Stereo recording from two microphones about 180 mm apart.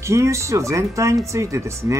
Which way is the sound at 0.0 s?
15° right (ahead or behind).